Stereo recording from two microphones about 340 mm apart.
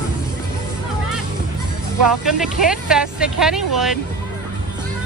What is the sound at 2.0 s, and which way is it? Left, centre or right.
Speech, centre.